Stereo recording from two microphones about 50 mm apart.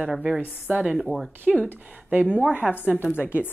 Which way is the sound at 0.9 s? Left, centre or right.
Centre.